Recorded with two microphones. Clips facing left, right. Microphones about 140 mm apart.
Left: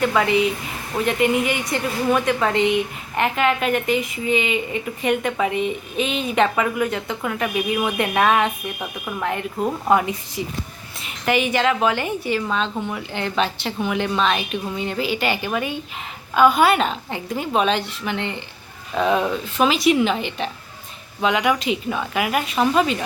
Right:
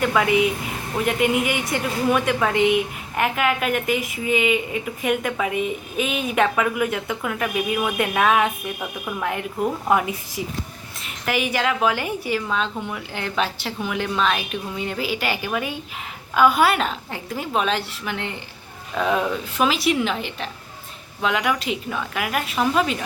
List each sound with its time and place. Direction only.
0.0 s a woman's voice: centre (ahead or behind)